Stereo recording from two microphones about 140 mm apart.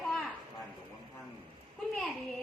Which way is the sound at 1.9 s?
Centre (ahead or behind).